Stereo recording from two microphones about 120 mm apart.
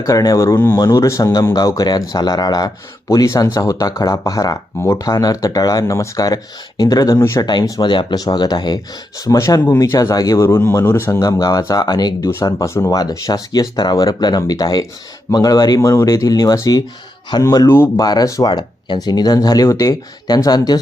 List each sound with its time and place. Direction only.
0.0 s speech: 30° left (ahead or behind)
7.4 s speech: 40° left (ahead or behind); by 18.0 s 20° left (ahead or behind)
18.0 s speech: 35° left (ahead or behind)